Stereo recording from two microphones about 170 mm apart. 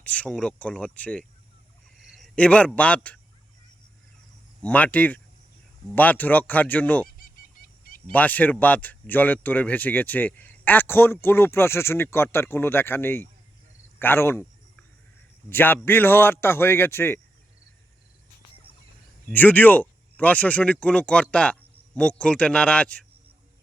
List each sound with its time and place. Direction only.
0.0 s speech: 10° left (ahead or behind)
4.6 s speech: 10° left (ahead or behind)
7.2 s fowl: 55° left (ahead or behind)
8.1 s speech: 10° left (ahead or behind)
14.0 s a sound: 15° left (ahead or behind)
15.4 s speech: 10° left (ahead or behind)
19.3 s speech: 10° left (ahead or behind)